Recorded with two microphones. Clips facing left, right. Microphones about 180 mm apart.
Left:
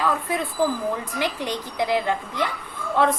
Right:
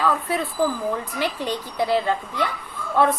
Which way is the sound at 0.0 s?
15° left (ahead or behind).